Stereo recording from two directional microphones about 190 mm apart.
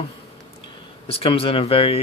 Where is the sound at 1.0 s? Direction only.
30° left (ahead or behind).